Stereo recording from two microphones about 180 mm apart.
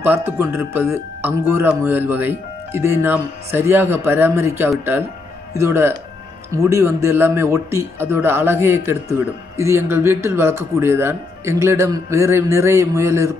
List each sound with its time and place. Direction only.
0.0 s speech: 15° right (ahead or behind)